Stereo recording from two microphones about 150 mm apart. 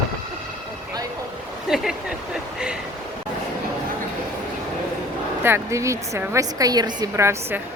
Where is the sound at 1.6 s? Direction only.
5° right (ahead or behind).